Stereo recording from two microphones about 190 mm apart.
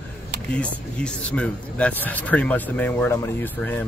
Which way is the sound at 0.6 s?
5° left (ahead or behind).